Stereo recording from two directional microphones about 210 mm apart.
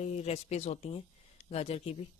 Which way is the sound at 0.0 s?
30° left (ahead or behind).